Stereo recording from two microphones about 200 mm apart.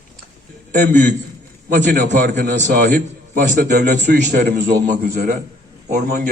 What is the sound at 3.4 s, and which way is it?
Speech, 40° right (ahead or behind).